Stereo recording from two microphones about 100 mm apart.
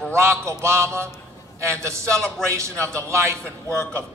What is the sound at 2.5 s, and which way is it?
Speech, 30° right (ahead or behind).